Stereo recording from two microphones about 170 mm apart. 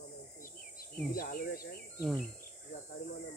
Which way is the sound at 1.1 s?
60° left (ahead or behind).